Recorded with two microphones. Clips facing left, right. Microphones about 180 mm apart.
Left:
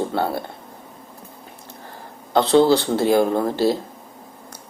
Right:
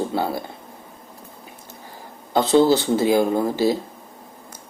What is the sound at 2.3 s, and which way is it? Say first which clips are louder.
Speech: left 1 dB; centre (ahead or behind).